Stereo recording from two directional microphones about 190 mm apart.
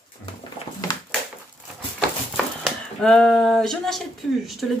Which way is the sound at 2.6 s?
5° left (ahead or behind).